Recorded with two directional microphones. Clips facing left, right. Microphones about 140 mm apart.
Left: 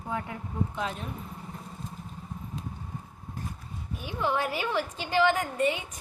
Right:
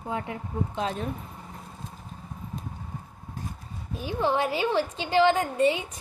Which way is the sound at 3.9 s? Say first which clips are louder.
Right 4 dB; 30° right (ahead or behind).